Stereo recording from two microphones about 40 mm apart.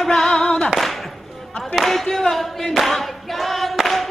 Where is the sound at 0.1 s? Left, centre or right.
Centre.